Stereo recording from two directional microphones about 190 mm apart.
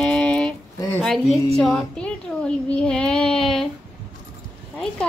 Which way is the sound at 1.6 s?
5° left (ahead or behind).